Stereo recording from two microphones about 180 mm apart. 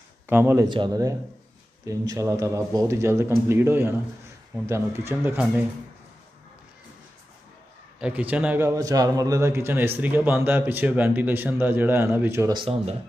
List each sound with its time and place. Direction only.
0.3 s a man's voice: 10° right (ahead or behind)
0.7 s a man's voice: 25° right (ahead or behind)
8.0 s a man's voice: 10° right (ahead or behind)
12.5 s speech: 30° right (ahead or behind)